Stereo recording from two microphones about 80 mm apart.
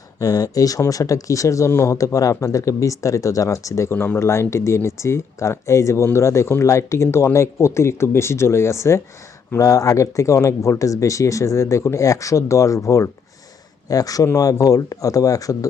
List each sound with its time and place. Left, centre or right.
0.2 s speech: left
3.9 s speech: left